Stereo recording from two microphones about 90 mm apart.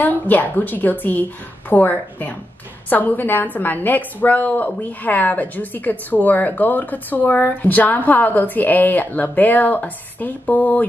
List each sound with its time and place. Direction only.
0.0 s a woman's voice: 20° left (ahead or behind)